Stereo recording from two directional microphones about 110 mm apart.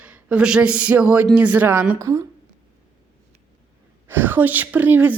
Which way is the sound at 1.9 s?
30° right (ahead or behind).